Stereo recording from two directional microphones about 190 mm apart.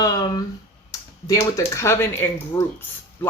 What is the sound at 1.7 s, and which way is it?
Speech, 15° left (ahead or behind).